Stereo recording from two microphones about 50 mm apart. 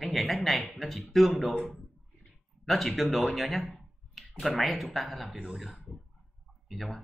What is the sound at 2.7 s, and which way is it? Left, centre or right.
A man's voice, centre.